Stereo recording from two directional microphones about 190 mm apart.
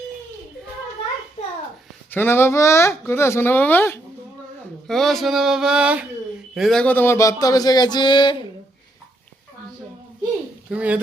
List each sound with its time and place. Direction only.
2.0 s speech: 10° left (ahead or behind)
4.9 s a sound: centre (ahead or behind)
6.5 s speech: centre (ahead or behind); by 8.4 s 25° left (ahead or behind)
10.7 s speech: 5° right (ahead or behind)